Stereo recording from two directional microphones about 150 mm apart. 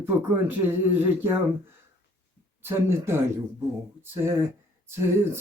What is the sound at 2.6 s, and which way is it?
Speech, 15° right (ahead or behind).